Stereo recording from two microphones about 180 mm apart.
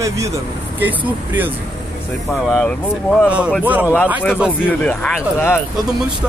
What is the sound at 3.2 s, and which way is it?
A man's voice, 5° right (ahead or behind).